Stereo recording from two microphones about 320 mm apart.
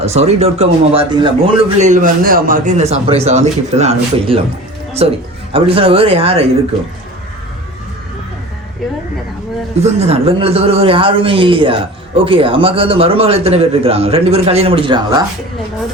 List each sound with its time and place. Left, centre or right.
0.0 s a man's voice: centre
9.8 s a man's voice: centre